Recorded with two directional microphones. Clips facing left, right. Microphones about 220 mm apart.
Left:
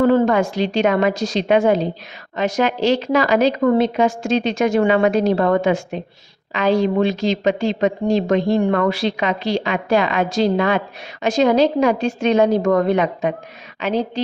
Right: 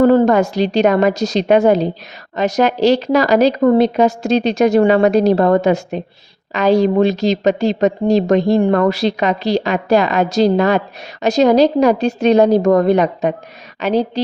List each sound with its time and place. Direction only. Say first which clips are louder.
0.0 s a woman's voice: right 4 dB; 40° right (ahead or behind)